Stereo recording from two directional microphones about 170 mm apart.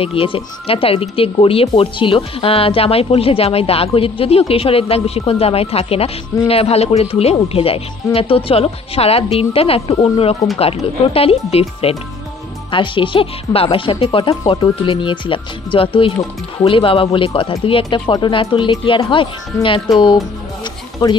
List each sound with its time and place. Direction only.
0.0 s speech: 35° left (ahead or behind)